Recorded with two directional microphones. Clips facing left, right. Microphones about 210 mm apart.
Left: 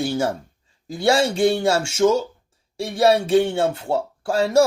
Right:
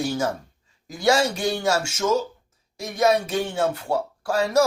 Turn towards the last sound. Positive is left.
turn(degrees=25)  # may be behind; listen again after turning